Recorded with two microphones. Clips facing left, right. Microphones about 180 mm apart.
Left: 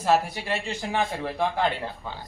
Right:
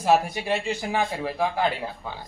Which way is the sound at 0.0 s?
15° right (ahead or behind).